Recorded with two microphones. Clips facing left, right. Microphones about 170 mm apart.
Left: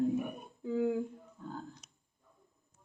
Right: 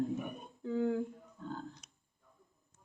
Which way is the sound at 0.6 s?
10° left (ahead or behind).